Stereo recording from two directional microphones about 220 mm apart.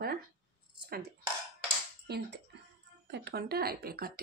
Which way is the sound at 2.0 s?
50° right (ahead or behind).